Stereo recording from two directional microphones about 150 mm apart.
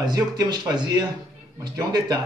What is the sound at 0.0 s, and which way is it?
A man's voice, 25° right (ahead or behind).